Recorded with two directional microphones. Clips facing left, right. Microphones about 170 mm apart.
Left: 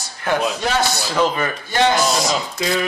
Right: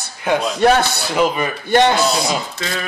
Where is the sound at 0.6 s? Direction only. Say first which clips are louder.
Right 6 dB; 60° right (ahead or behind).